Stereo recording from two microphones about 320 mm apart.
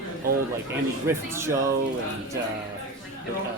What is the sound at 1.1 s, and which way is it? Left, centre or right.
Speech, centre.